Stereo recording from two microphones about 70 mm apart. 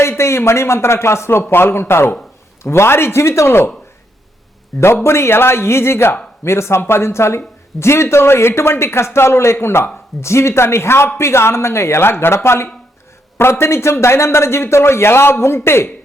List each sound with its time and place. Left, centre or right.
0.0 s speech: left
4.7 s a man's voice: centre
5.0 s speech: left